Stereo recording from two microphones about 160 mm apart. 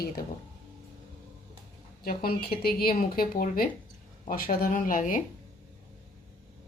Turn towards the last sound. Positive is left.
turn(degrees=60)  # may be behind; listen again after turning